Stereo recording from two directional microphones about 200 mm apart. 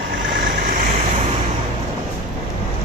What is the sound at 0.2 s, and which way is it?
Vehicle, 50° right (ahead or behind).